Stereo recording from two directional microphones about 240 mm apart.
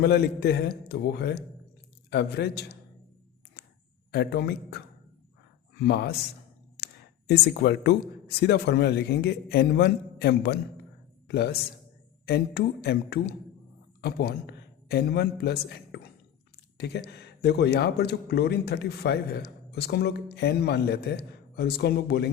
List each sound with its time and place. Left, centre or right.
0.0 s a man's voice: left
4.1 s a man's voice: left
5.8 s a man's voice: left